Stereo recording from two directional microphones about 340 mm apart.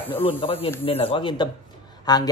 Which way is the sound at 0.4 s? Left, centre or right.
Centre.